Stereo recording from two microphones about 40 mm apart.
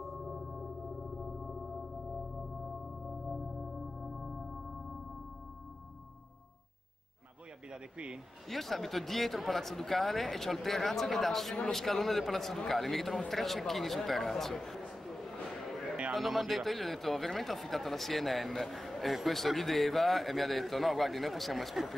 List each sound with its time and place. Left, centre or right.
0.0 s music: centre
4.0 s music: centre
7.7 s speech: right
8.5 s a man's voice: centre
16.1 s speech: centre